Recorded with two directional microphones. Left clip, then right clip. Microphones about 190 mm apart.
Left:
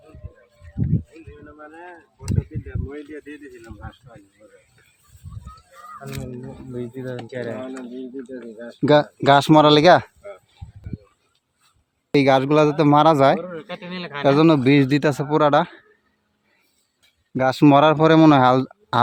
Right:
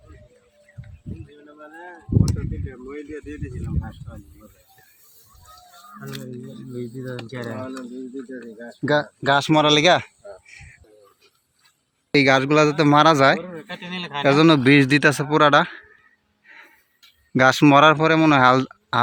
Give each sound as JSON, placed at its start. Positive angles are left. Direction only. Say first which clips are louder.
{"t": 1.5, "sound": "a man's voice", "louder": "right 1 dB", "side_deg": 5}
{"t": 3.2, "sound": "a man's voice", "louder": "right 2 dB", "side_deg": 15}
{"t": 6.7, "sound": "a man's voice", "louder": "left 2 dB", "side_deg": -5}
{"t": 8.3, "sound": "speech", "louder": "left 1 dB", "side_deg": 30}
{"t": 9.5, "sound": "speech", "louder": "left 3 dB", "side_deg": 25}
{"t": 12.1, "sound": "a man's voice", "louder": "even", "side_deg": 5}
{"t": 13.4, "sound": "speech", "louder": "left 2 dB", "side_deg": -20}
{"t": 14.3, "sound": "a man's voice", "louder": "even", "side_deg": 0}
{"t": 17.3, "sound": "a man's voice", "louder": "right 3 dB", "side_deg": -5}
{"t": 17.7, "sound": "a man's voice", "louder": "left 1 dB", "side_deg": 10}
{"t": 18.0, "sound": "a man's voice", "louder": "left 2 dB", "side_deg": 20}